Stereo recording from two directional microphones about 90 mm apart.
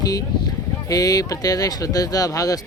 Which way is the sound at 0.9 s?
40° left (ahead or behind).